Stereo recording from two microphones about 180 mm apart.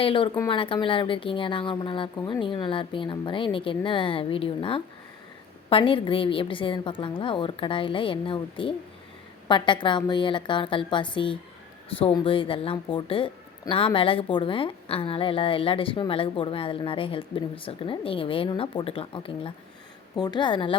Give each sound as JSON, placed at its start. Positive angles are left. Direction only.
{"t": 0.0, "sound": "a woman's voice", "side_deg": 30}